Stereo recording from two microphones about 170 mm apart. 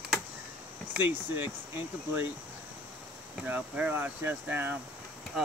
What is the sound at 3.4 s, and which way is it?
Speech, 10° right (ahead or behind).